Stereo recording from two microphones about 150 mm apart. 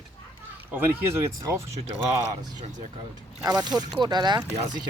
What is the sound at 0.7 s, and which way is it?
Speech, 15° right (ahead or behind).